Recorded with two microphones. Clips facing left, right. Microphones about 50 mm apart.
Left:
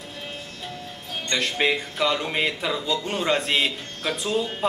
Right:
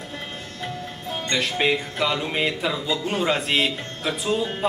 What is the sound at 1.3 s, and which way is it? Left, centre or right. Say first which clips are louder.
Speech: right 1 dB; centre.